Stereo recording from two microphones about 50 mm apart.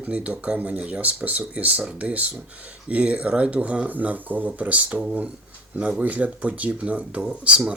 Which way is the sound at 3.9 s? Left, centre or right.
Right.